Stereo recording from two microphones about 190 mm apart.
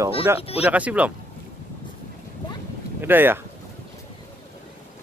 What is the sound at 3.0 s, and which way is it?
Speech, 10° right (ahead or behind).